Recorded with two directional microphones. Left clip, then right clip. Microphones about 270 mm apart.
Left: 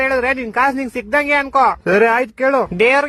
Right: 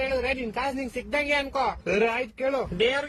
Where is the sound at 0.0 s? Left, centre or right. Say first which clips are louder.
Left 10 dB; left.